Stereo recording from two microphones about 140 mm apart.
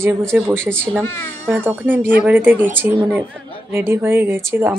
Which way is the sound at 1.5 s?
15° right (ahead or behind).